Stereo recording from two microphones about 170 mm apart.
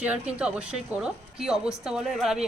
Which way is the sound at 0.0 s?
5° right (ahead or behind).